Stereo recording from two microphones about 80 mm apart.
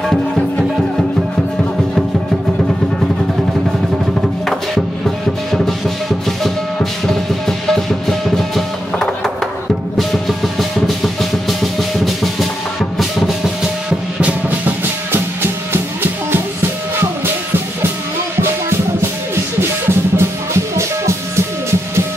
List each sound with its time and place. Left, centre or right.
4.5 s music: centre
13.8 s music: centre
15.1 s music: right
18.4 s music: right